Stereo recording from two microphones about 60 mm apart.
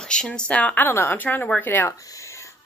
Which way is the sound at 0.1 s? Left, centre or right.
Centre.